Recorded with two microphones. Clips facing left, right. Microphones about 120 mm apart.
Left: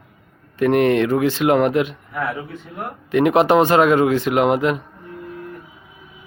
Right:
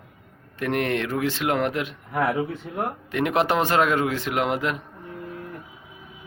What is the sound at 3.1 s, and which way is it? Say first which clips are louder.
Speech: left 9 dB; 10° left (ahead or behind).